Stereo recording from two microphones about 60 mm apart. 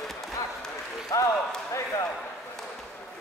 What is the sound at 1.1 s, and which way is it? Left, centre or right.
Speech, left.